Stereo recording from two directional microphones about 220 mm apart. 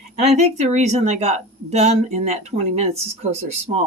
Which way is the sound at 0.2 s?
30° right (ahead or behind).